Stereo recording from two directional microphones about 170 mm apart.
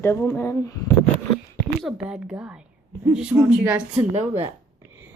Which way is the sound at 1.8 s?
5° right (ahead or behind).